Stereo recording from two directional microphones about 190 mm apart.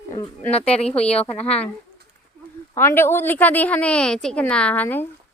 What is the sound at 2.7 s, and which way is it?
A woman's voice, 10° left (ahead or behind).